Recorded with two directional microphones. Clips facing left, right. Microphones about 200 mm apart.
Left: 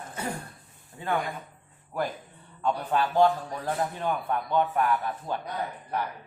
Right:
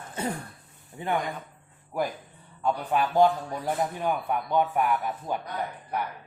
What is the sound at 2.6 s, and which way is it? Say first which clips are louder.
A man's voice: right 1 dB; 10° right (ahead or behind).